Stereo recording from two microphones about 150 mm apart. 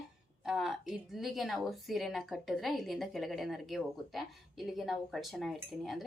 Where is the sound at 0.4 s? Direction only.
Centre (ahead or behind).